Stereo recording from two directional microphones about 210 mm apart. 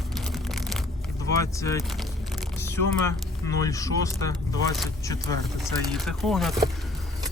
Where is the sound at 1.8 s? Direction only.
Centre (ahead or behind).